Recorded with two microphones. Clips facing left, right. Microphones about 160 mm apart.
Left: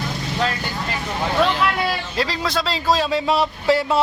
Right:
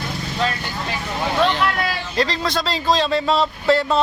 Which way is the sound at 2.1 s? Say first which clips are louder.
Right 5 dB; 5° left (ahead or behind).